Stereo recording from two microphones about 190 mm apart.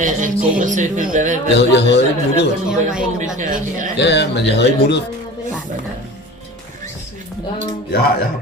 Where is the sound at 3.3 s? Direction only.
40° right (ahead or behind).